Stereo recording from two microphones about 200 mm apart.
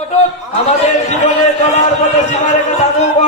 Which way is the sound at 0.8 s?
35° left (ahead or behind).